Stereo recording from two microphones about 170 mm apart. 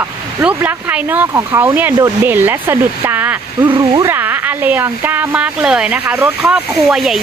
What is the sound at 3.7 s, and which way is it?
Speech, 30° right (ahead or behind).